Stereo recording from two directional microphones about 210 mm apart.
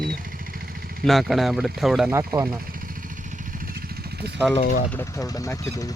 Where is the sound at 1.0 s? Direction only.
Centre (ahead or behind).